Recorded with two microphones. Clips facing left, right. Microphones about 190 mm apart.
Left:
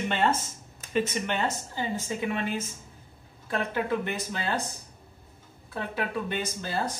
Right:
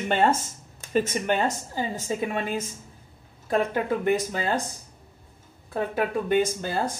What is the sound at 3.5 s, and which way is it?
A woman's voice, 45° right (ahead or behind).